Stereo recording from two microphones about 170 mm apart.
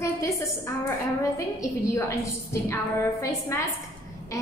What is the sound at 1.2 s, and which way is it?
A woman's voice, 15° left (ahead or behind).